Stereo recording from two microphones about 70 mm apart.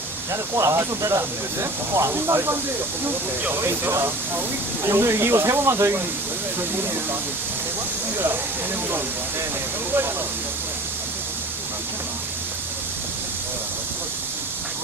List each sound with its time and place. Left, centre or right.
0.5 s speech: right
3.8 s speech: right